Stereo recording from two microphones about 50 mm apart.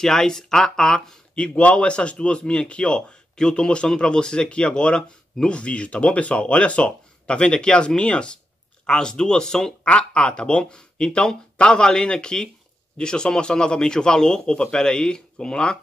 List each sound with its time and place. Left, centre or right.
0.0 s a man's voice: centre